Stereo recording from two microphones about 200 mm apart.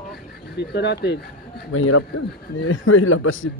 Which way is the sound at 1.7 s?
85° left.